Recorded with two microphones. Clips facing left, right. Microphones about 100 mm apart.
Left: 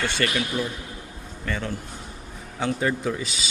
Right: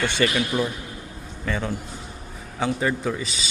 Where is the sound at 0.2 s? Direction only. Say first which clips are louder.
Right 5 dB; 10° right (ahead or behind).